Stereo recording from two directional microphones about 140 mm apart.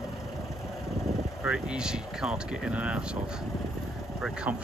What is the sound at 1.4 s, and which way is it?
Speech, 5° right (ahead or behind).